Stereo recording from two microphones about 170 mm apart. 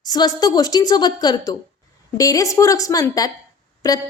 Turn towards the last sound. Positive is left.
turn(degrees=20)  # may be behind; listen again after turning